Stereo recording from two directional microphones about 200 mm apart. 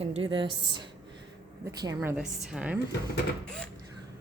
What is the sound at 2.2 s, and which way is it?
Speech, 5° right (ahead or behind).